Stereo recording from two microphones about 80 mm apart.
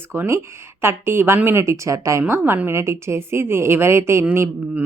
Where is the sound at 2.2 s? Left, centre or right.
Right.